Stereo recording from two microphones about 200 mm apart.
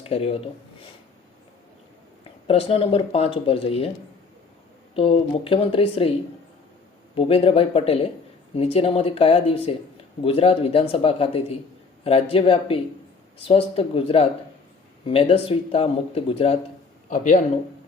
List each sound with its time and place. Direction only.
0.0 s speech: 30° left (ahead or behind)
2.5 s speech: 30° left (ahead or behind)
4.9 s speech: 30° left (ahead or behind)
7.2 s speech: 30° left (ahead or behind)
17.1 s a man's voice: 40° left (ahead or behind)